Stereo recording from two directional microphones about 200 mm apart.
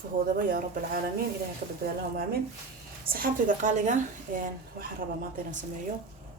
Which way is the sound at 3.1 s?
45° right (ahead or behind).